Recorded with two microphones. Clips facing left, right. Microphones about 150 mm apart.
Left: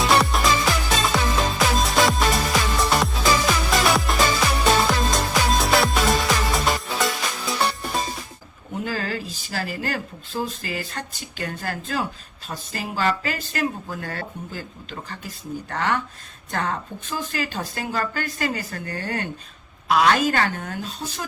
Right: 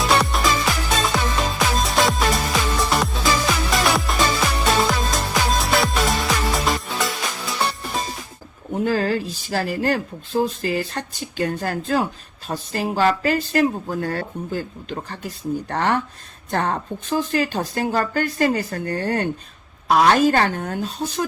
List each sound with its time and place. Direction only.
0.0 s music: centre (ahead or behind)
8.8 s speech: 45° right (ahead or behind)